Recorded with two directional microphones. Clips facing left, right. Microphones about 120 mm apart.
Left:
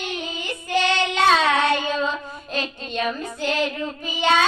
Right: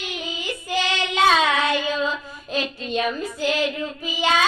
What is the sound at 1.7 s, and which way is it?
Child singing, 40° left (ahead or behind).